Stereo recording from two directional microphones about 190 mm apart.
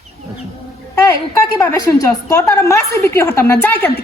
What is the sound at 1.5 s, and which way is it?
A woman's voice, 15° left (ahead or behind).